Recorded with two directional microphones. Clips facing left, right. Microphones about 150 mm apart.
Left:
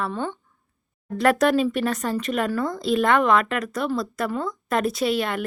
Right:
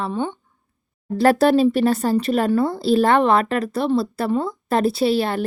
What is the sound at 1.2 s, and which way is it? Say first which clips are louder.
A woman's voice: right 4 dB; 35° right (ahead or behind).